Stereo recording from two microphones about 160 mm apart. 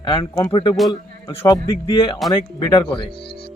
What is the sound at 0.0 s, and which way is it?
Speech, 30° left (ahead or behind).